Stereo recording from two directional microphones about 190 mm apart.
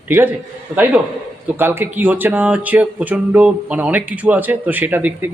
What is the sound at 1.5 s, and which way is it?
Speech, 10° right (ahead or behind).